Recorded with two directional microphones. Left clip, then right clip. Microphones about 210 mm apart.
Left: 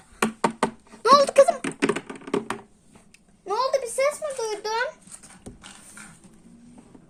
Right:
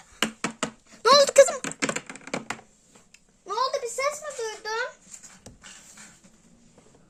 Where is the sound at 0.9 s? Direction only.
5° right (ahead or behind).